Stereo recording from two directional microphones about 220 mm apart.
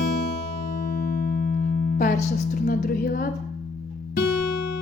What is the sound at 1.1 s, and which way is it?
Music, 45° left (ahead or behind).